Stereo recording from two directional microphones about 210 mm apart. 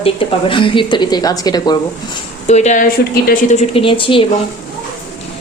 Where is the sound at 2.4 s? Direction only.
35° left (ahead or behind).